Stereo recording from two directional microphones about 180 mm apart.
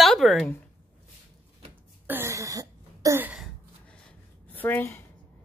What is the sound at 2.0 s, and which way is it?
Throat clearing, 15° right (ahead or behind).